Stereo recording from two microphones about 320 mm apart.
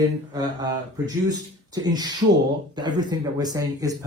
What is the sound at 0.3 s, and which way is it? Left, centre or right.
A man's voice, centre.